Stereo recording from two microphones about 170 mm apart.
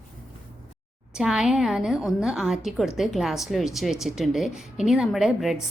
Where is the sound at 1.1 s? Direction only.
5° right (ahead or behind).